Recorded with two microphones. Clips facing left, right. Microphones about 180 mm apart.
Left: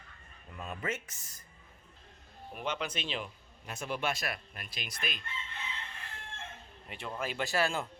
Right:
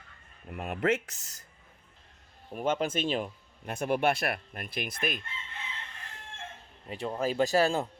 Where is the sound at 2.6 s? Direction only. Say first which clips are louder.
Right 8 dB; 45° right (ahead or behind).